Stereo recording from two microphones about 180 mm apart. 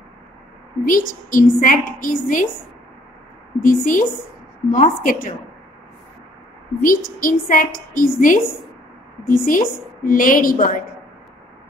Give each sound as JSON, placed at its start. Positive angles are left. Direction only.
{"t": 0.8, "sound": "a woman's voice", "side_deg": 50}
{"t": 3.6, "sound": "a woman's voice", "side_deg": 50}
{"t": 6.8, "sound": "a woman's voice", "side_deg": 50}